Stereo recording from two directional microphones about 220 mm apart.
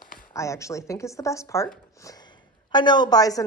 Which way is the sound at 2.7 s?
20° left (ahead or behind).